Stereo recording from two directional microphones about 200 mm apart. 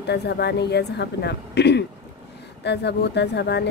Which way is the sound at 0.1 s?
55° left (ahead or behind).